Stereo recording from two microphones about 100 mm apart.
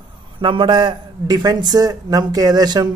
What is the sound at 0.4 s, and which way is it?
A man's voice, 55° right (ahead or behind).